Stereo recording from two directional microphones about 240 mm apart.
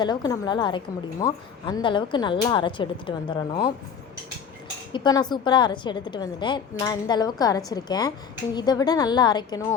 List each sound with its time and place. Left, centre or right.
0.0 s speech: centre
4.9 s a woman's voice: centre